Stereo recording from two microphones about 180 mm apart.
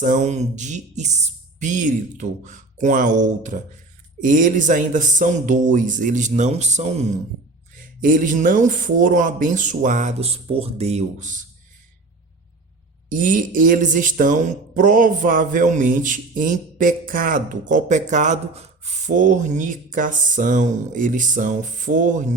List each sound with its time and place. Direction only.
0.0 s speech: 45° right (ahead or behind)
13.1 s speech: 50° right (ahead or behind)